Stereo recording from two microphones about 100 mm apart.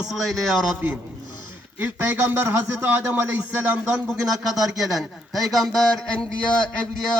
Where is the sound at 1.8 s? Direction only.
20° right (ahead or behind).